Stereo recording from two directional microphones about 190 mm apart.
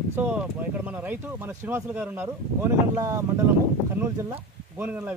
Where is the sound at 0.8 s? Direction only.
10° right (ahead or behind).